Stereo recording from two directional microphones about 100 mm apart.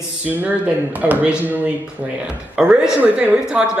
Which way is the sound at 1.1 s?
15° right (ahead or behind).